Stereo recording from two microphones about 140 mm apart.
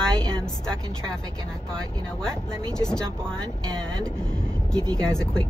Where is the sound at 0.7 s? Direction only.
5° left (ahead or behind).